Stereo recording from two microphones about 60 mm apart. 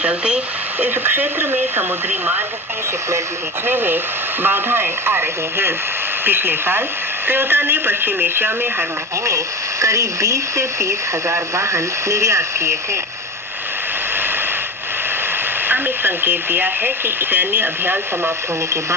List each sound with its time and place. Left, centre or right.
0.0 s speech: centre
0.8 s speech: right
3.7 s speech: right
9.8 s speech: right
15.6 s speech: right